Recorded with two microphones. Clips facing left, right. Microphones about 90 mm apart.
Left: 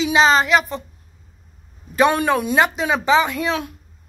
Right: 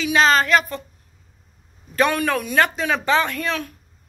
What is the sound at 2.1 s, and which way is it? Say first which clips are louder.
Speech: left 4 dB; 25° left (ahead or behind).